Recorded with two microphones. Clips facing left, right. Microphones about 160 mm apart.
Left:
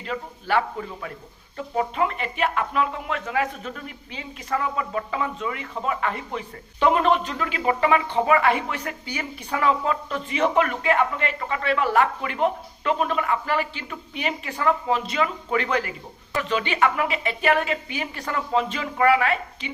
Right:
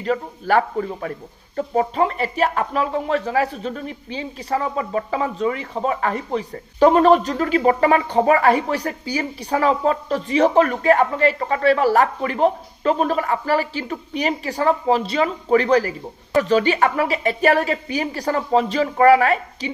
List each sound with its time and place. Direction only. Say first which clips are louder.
0.0 s a man's voice: right 8 dB; 45° right (ahead or behind)